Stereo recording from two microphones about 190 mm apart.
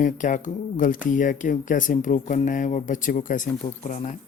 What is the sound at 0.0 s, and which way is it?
Speech, 40° left (ahead or behind).